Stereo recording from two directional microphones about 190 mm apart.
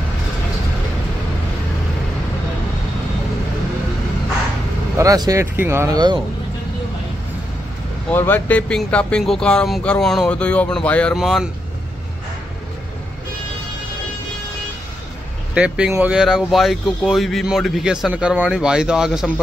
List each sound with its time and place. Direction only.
4.9 s speech: 20° right (ahead or behind)
8.1 s speech: 10° left (ahead or behind)
15.5 s speech: 5° right (ahead or behind)